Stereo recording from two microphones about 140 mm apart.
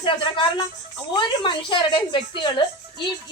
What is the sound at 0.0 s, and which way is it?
A woman's voice, 35° left (ahead or behind).